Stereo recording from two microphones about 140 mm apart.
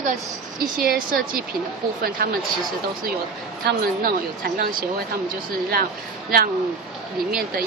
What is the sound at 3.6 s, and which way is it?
Speech, 90° right.